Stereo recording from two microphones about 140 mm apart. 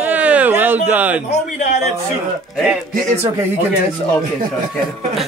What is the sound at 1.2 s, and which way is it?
Speech, 60° left (ahead or behind).